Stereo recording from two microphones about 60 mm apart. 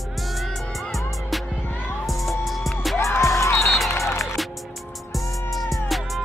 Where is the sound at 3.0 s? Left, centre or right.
Left.